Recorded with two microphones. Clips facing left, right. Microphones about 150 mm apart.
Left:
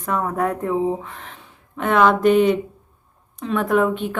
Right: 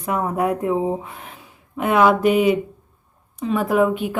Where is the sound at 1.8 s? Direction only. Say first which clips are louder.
Even; 10° right (ahead or behind).